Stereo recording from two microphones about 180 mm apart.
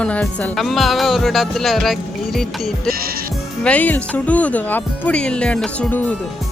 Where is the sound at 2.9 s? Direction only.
55° right (ahead or behind).